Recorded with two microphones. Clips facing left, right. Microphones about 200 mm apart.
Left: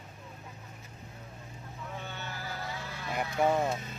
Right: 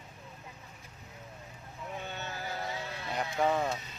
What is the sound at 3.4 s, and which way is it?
Speech, 15° left (ahead or behind).